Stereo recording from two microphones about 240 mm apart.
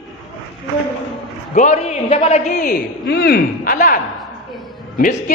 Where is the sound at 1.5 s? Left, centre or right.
Left.